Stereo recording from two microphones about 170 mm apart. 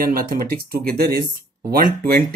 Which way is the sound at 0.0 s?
55° right (ahead or behind).